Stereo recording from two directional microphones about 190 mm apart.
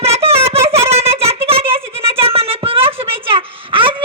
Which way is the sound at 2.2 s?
30° right (ahead or behind).